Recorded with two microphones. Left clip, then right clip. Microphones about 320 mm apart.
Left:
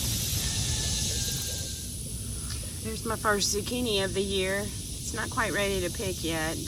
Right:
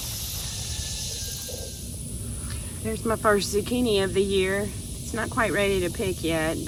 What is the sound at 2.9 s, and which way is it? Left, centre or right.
Speech, centre.